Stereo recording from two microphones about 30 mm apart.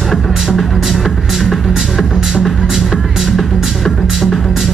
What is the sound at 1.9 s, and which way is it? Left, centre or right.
Music, centre.